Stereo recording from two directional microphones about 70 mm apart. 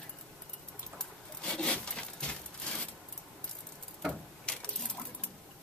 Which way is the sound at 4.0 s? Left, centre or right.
Centre.